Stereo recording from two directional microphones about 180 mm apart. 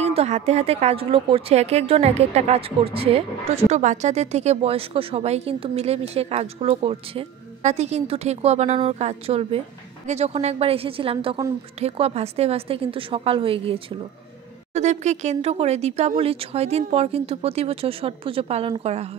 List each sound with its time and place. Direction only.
0.0 s a woman's voice: 35° right (ahead or behind)